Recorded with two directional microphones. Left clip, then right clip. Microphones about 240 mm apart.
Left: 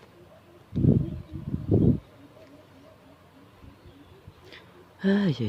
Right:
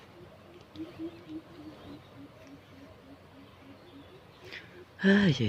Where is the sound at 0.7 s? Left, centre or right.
Left.